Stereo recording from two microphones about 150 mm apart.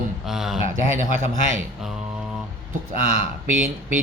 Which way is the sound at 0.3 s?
Centre (ahead or behind).